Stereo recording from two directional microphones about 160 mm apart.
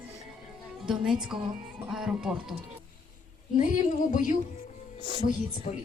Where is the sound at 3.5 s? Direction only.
50° left (ahead or behind).